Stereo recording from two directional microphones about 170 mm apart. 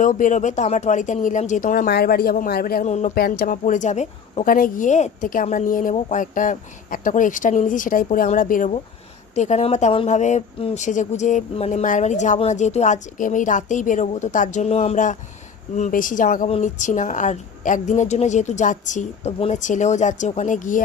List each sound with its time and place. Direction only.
0.0 s speech: 50° left (ahead or behind)
2.8 s speech: 45° left (ahead or behind)
3.2 s speech: 60° left (ahead or behind); by 4.5 s 40° left (ahead or behind)
4.5 s speech: 55° left (ahead or behind)
9.3 s speech: 45° left (ahead or behind)